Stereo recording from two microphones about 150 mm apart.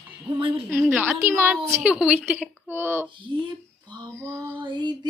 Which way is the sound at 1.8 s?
5° right (ahead or behind).